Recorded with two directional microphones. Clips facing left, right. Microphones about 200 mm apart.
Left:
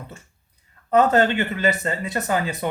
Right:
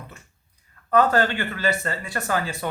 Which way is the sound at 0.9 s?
20° left (ahead or behind).